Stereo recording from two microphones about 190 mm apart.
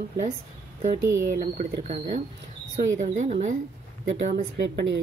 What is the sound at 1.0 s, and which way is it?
Speech, 15° right (ahead or behind).